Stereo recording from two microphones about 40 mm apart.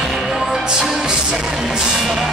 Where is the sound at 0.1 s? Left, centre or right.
Centre.